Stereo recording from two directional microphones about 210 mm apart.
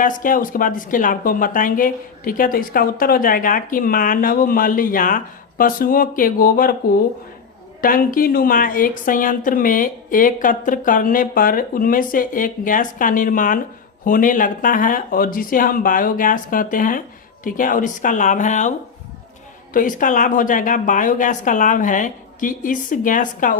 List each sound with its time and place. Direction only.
0.0 s speech: 40° left (ahead or behind)
7.8 s speech: 40° left (ahead or behind)
19.7 s speech: 40° left (ahead or behind)